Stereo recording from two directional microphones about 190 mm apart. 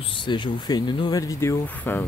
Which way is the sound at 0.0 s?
25° left (ahead or behind).